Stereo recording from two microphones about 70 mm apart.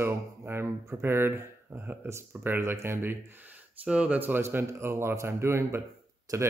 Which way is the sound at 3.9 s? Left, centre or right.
Centre.